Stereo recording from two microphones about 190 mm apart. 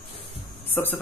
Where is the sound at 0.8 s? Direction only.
10° left (ahead or behind).